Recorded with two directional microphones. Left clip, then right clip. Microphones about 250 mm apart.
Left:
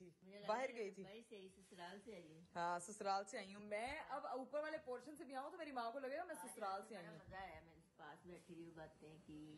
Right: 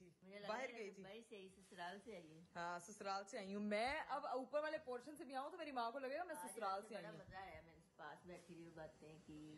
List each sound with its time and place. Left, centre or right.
0.3 s a woman's voice: centre
3.5 s a woman's voice: right
4.1 s a woman's voice: centre